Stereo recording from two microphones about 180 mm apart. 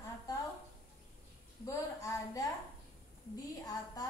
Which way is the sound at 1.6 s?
15° left (ahead or behind).